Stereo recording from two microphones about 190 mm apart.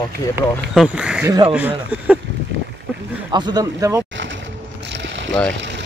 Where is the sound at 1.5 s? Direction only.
5° right (ahead or behind).